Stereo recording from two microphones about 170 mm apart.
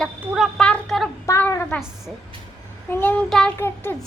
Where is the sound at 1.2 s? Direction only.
15° left (ahead or behind).